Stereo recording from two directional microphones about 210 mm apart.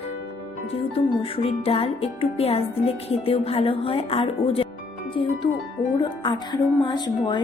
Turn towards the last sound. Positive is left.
turn(degrees=20)  # may be behind; listen again after turning